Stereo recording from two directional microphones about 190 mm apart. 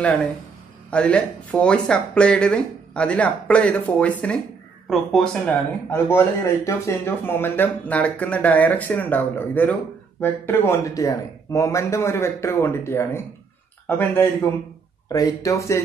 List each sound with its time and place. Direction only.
0.8 s speech: 5° left (ahead or behind)